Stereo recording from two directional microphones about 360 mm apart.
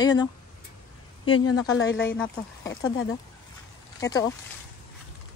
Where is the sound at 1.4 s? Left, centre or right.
Left.